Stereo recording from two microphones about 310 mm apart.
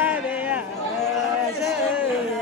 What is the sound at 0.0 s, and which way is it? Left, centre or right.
Chatter, centre.